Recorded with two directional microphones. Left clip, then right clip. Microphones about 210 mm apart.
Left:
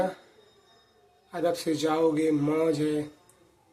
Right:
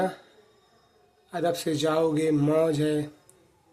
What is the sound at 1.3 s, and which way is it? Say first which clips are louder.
Speech: right 1 dB; 25° right (ahead or behind).